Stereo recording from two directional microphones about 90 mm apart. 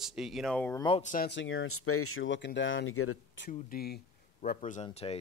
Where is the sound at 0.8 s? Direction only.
65° left (ahead or behind).